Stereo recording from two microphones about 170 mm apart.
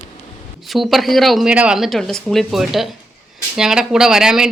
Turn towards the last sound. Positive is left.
turn(degrees=-5)  # may be behind; listen again after turning